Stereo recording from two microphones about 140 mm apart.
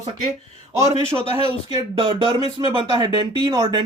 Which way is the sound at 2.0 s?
40° right (ahead or behind).